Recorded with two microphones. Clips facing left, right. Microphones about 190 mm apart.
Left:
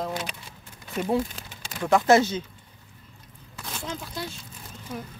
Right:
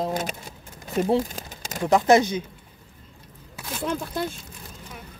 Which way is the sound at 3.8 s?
55° right (ahead or behind).